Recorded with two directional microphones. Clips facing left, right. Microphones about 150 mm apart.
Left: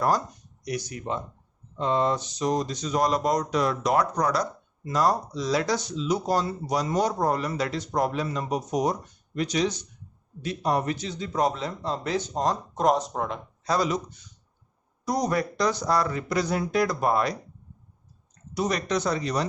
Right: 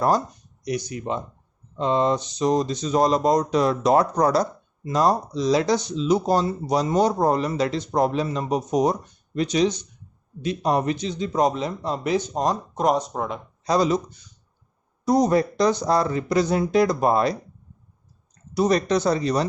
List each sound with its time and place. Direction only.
0.6 s speech: 20° right (ahead or behind)
12.7 s speech: centre (ahead or behind)
13.7 s speech: 25° right (ahead or behind)
18.5 s speech: 35° right (ahead or behind)